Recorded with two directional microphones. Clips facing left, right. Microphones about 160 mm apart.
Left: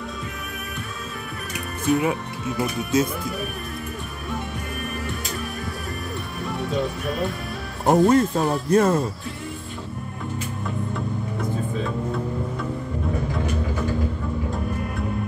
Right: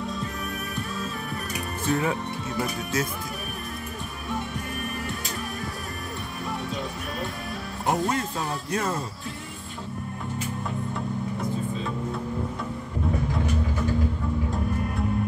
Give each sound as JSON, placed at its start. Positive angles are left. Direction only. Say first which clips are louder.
{"t": 1.9, "sound": "speech", "louder": "left 4 dB", "side_deg": 15}
{"t": 7.8, "sound": "speech", "louder": "left 9 dB", "side_deg": 45}